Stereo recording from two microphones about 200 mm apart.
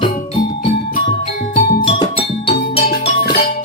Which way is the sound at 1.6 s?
45° left (ahead or behind).